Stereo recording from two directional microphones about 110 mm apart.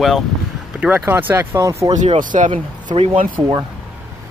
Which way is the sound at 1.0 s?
20° right (ahead or behind).